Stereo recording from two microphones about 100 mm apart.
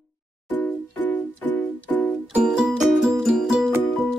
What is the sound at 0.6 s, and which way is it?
Music, 20° left (ahead or behind).